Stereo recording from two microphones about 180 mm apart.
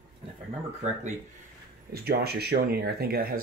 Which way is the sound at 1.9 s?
60° right (ahead or behind).